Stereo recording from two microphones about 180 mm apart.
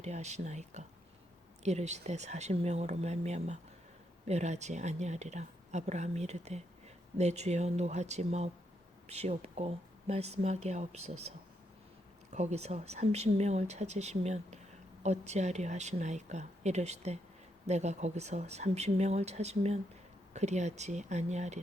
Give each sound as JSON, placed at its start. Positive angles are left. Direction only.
{"t": 0.0, "sound": "speech", "side_deg": -40}